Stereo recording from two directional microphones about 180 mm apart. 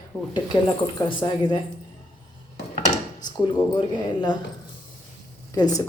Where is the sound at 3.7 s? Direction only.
25° left (ahead or behind).